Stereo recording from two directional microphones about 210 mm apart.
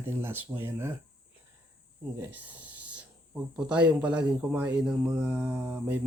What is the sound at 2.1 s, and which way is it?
A man's voice, 10° right (ahead or behind).